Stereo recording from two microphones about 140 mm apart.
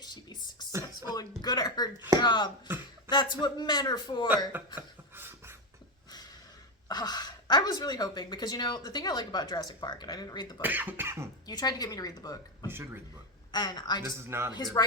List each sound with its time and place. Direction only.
0.0 s a sound: 30° left (ahead or behind)
2.1 s a man's voice: 35° left (ahead or behind)
4.5 s beatboxing: 15° right (ahead or behind)
6.8 s speech: 30° left (ahead or behind)
10.6 s speech: 15° right (ahead or behind)
11.4 s speech: 30° left (ahead or behind)
12.6 s speech: 15° right (ahead or behind)
13.5 s a man's voice: 30° left (ahead or behind)
14.0 s speech: 20° right (ahead or behind)
14.5 s speech: 30° left (ahead or behind)